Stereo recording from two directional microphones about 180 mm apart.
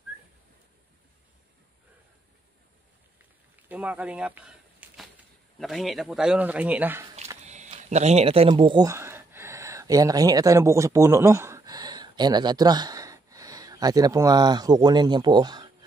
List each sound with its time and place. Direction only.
3.6 s a sound: 10° right (ahead or behind)
5.6 s speech: centre (ahead or behind)
7.4 s speech: 40° right (ahead or behind); by 15.7 s 25° right (ahead or behind)